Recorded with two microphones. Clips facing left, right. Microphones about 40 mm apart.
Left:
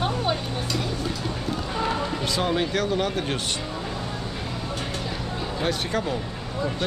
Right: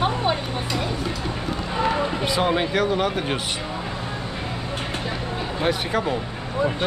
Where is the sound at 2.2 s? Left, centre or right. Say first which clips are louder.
Right 2 dB; centre.